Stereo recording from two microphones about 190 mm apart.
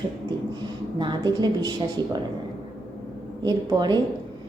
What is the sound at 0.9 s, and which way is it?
Music, 25° right (ahead or behind).